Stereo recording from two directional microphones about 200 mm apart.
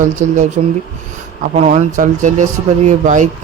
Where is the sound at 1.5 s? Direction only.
35° right (ahead or behind).